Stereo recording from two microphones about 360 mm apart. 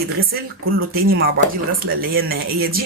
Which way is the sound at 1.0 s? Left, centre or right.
Right.